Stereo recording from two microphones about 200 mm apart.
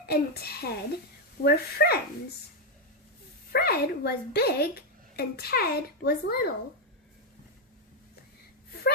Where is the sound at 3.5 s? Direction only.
50° left (ahead or behind).